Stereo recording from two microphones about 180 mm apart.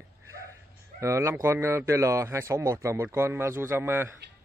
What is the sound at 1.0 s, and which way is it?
Speech, 15° right (ahead or behind).